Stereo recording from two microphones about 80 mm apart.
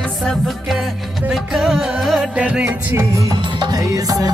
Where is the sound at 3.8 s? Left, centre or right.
Right.